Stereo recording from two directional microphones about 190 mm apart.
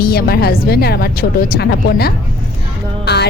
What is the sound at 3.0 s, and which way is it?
Music, 60° left (ahead or behind).